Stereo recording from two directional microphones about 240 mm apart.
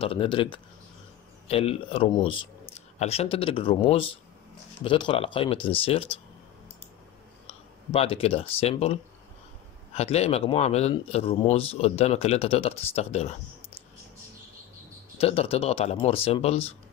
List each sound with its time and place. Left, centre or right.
0.0 s speech: left
7.4 s speech: left
9.9 s speech: left
15.1 s speech: left